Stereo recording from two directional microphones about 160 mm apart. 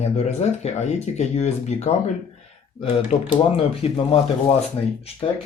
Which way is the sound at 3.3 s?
35° left (ahead or behind).